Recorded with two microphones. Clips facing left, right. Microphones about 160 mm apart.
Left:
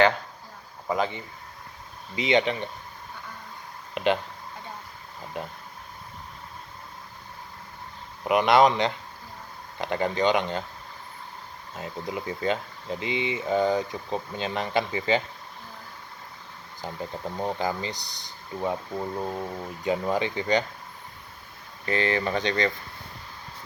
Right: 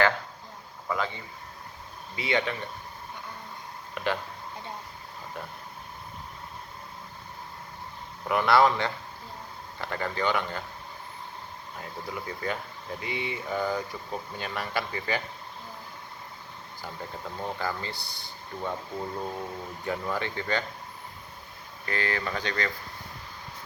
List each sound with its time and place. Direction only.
0.9 s speech: 20° left (ahead or behind)
3.9 s speech: 20° left (ahead or behind)
8.2 s speech: 20° left (ahead or behind)
11.7 s speech: 20° left (ahead or behind)
16.8 s speech: 20° left (ahead or behind)
21.8 s speech: 20° left (ahead or behind)